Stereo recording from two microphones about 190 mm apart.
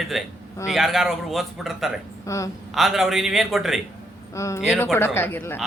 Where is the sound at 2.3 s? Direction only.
15° left (ahead or behind).